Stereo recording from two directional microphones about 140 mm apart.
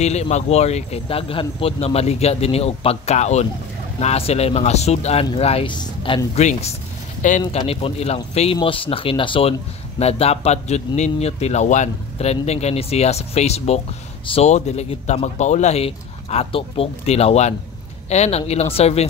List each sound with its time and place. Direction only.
0.0 s speech: 50° left (ahead or behind); by 6.2 s 35° left (ahead or behind)
6.3 s speech: 50° left (ahead or behind)
7.2 s speech: 60° left (ahead or behind)
7.6 s speech: 45° left (ahead or behind)